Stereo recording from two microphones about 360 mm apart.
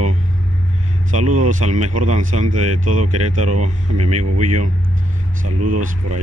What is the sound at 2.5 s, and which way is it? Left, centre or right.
Speech, right.